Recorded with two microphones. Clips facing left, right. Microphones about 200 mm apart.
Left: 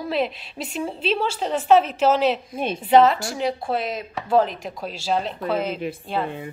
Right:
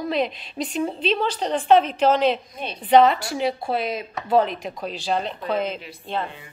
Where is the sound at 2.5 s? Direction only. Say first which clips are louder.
Left 7 dB; 50° left (ahead or behind).